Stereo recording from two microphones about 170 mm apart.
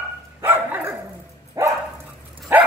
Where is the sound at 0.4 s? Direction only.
10° right (ahead or behind).